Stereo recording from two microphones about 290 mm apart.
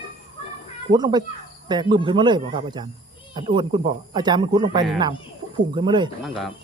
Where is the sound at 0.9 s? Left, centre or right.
Centre.